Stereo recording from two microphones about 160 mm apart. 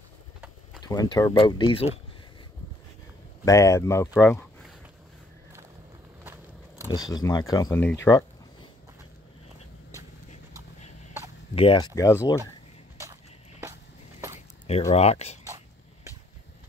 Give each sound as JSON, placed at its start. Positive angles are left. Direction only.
{"t": 0.8, "sound": "speech", "side_deg": 25}
{"t": 3.4, "sound": "speech", "side_deg": 20}
{"t": 6.9, "sound": "speech", "side_deg": 25}
{"t": 11.5, "sound": "speech", "side_deg": 35}
{"t": 11.9, "sound": "speech", "side_deg": 20}
{"t": 14.7, "sound": "speech", "side_deg": 40}
{"t": 15.4, "sound": "a sound", "side_deg": -20}